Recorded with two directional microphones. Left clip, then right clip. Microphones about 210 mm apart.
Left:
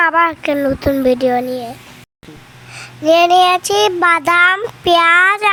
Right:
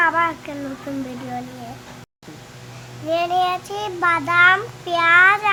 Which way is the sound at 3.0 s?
45° left (ahead or behind).